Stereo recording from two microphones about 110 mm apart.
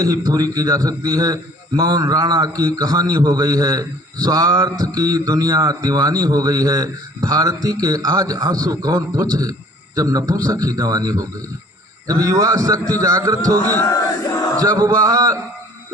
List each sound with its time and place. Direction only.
0.3 s a man's voice: 30° right (ahead or behind)
13.6 s speech: 20° left (ahead or behind)
13.8 s crowd: 30° left (ahead or behind)
14.6 s a man's voice: 35° right (ahead or behind)